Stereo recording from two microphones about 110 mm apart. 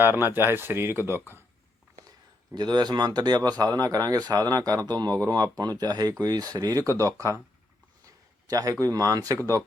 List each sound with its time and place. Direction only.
0.0 s speech: 20° right (ahead or behind)
2.6 s speech: 40° right (ahead or behind)